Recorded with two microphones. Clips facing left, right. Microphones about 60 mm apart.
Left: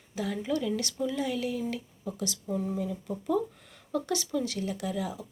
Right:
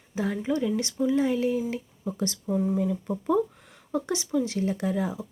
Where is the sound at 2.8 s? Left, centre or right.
Right.